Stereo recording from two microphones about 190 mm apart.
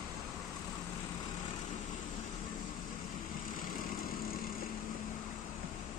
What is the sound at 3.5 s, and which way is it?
Vehicle, 45° left (ahead or behind).